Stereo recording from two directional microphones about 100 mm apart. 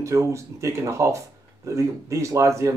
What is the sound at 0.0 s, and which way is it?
Speech, 30° right (ahead or behind).